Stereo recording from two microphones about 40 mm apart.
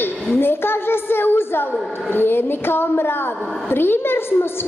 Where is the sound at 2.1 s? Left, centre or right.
Left.